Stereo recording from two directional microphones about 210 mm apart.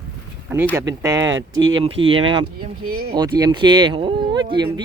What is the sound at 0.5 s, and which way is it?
Speech, 10° right (ahead or behind).